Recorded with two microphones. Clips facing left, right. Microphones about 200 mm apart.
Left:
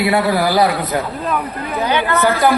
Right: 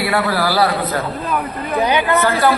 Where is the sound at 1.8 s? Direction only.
15° right (ahead or behind).